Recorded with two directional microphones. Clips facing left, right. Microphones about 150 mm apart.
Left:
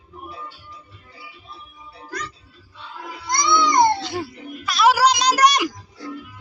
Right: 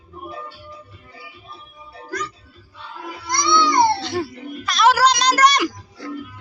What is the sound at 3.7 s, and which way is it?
Music, 15° left (ahead or behind).